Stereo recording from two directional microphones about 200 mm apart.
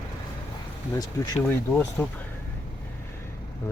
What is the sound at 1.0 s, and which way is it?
Speech, 20° left (ahead or behind).